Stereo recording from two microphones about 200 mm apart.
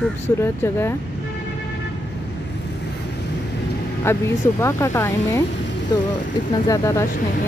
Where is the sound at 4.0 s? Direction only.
15° left (ahead or behind).